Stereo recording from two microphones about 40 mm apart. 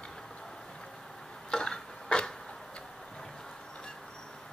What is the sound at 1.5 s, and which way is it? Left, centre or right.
Tick-tock, centre.